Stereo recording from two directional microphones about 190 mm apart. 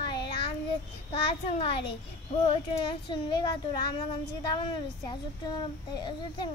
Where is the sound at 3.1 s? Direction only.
25° left (ahead or behind).